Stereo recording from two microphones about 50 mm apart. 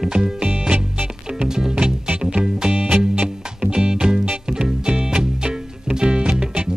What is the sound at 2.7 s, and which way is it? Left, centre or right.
Music, right.